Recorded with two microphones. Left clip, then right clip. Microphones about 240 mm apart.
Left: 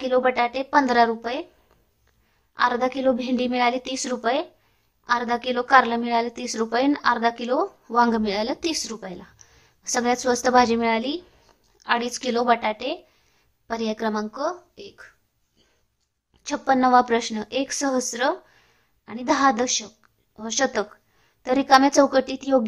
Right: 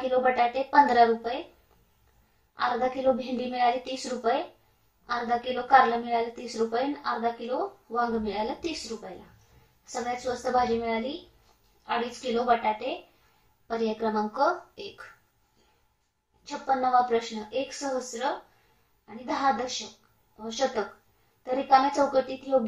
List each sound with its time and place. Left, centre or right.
0.0 s a woman's voice: left
2.5 s a woman's voice: left
10.5 s a woman's voice: left; by 15.0 s centre
16.4 s a woman's voice: left